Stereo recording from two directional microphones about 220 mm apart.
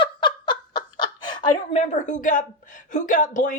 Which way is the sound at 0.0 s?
20° left (ahead or behind).